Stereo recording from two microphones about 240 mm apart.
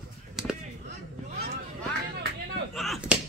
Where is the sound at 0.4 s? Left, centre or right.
Centre.